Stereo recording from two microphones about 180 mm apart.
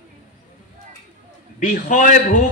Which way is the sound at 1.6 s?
50° left (ahead or behind).